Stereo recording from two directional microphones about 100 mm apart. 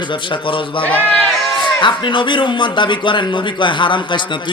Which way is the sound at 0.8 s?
15° left (ahead or behind).